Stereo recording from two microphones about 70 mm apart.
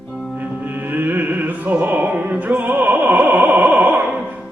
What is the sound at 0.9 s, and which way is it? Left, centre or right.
Music, right.